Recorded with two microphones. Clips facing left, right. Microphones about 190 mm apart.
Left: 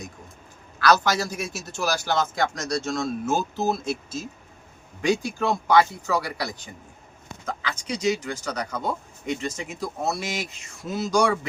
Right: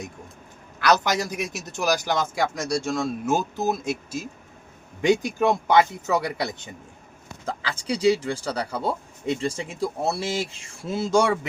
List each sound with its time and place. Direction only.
0.8 s a man's voice: 20° right (ahead or behind)